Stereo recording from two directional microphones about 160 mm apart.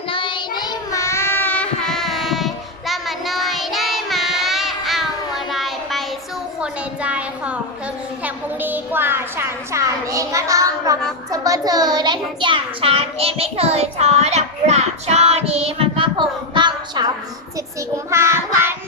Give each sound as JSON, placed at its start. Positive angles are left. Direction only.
{"t": 0.1, "sound": "child singing", "side_deg": 30}
{"t": 5.5, "sound": "a sound", "side_deg": 0}
{"t": 11.3, "sound": "a child's voice", "side_deg": -20}
{"t": 18.1, "sound": "child singing", "side_deg": -15}